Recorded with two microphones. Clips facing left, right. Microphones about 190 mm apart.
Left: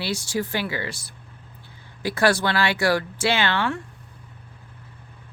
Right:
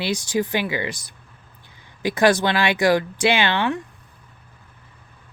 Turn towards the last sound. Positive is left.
turn(degrees=-20)  # may be behind; listen again after turning